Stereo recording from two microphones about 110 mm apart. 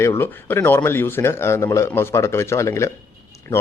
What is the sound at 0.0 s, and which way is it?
Speech, 20° left (ahead or behind).